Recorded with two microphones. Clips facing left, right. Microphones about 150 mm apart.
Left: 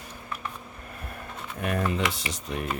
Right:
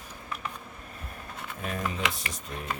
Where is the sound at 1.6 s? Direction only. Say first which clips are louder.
Left 5 dB; 70° left (ahead or behind).